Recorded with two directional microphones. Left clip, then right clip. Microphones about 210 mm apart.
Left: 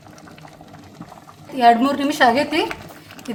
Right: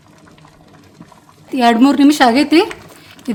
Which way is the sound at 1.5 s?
55° right (ahead or behind).